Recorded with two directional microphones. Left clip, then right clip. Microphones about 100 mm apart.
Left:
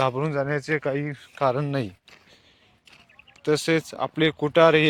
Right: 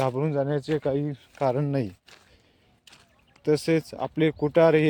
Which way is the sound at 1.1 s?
45° right (ahead or behind).